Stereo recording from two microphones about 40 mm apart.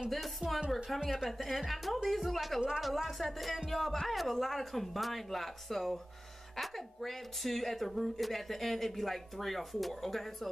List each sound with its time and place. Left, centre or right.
0.4 s a woman's voice: right
0.8 s a woman's voice: centre